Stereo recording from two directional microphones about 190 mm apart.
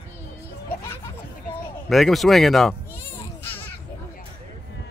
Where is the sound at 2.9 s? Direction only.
10° left (ahead or behind).